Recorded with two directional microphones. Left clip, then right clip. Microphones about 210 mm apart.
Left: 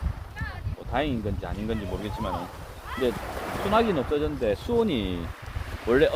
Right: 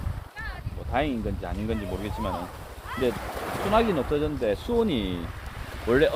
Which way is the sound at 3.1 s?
55° right (ahead or behind).